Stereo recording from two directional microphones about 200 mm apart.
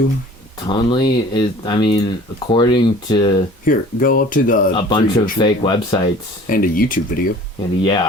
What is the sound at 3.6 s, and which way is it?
Speech, 45° left (ahead or behind).